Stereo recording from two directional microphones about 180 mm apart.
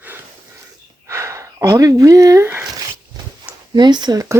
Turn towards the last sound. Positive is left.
turn(degrees=-15)  # may be behind; listen again after turning